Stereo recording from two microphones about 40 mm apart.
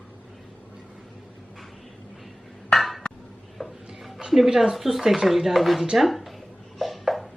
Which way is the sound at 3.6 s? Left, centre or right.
Centre.